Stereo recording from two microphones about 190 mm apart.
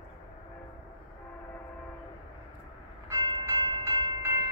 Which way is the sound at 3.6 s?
25° right (ahead or behind).